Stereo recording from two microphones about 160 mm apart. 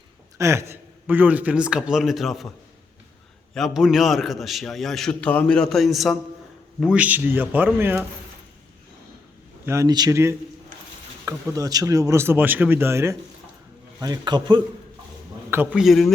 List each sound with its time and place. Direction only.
0.3 s a man's voice: 15° right (ahead or behind); by 2.5 s centre (ahead or behind)
3.5 s a man's voice: centre (ahead or behind)
9.6 s a man's voice: 20° right (ahead or behind)
15.4 s a man's voice: 15° right (ahead or behind)
15.8 s a man's voice: centre (ahead or behind)